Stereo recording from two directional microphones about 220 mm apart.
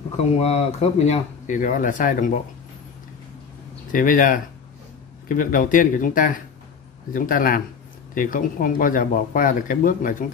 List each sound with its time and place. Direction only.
0.4 s speech: 30° left (ahead or behind)
3.9 s speech: 40° left (ahead or behind)